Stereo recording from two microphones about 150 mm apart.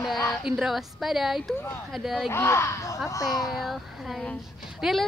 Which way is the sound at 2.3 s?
20° left (ahead or behind).